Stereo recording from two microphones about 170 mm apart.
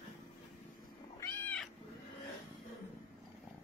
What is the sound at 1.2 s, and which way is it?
Cat, 10° left (ahead or behind).